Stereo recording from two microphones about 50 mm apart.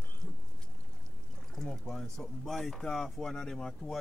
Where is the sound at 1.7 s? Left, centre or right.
Centre.